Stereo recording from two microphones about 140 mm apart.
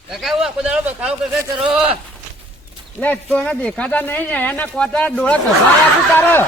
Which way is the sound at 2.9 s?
10° left (ahead or behind).